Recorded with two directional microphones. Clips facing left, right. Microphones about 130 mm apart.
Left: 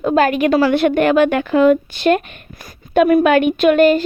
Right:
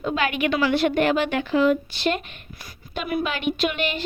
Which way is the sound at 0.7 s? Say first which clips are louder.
Left 6 dB; 55° left (ahead or behind).